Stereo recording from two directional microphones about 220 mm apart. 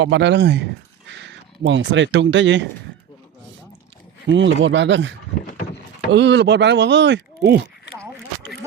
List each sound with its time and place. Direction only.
0.0 s speech: 55° right (ahead or behind)
4.3 s speech: 55° right (ahead or behind)